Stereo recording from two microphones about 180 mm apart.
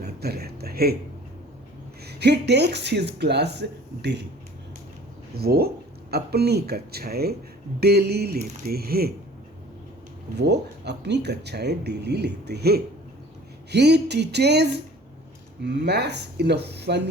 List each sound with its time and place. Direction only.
0.0 s a sound: 60° right (ahead or behind)
2.0 s speech: 65° right (ahead or behind)
5.4 s speech: 60° right (ahead or behind)
10.3 s speech: 70° right (ahead or behind)